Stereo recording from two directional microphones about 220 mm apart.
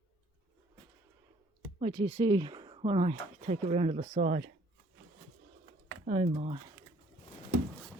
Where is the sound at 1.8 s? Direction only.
25° right (ahead or behind).